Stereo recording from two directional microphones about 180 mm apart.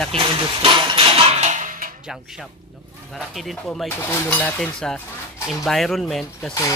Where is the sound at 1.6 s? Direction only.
50° right (ahead or behind).